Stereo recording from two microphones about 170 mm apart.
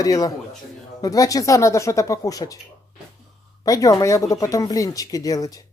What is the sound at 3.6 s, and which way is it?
Speech, 20° left (ahead or behind).